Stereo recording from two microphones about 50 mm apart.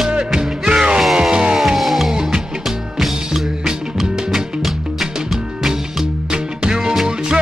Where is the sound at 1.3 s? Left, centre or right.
Centre.